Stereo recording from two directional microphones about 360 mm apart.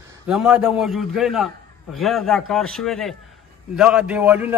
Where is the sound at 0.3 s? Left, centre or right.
Centre.